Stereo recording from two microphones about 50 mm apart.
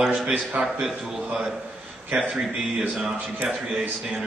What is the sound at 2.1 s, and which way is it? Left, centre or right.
Speech, right.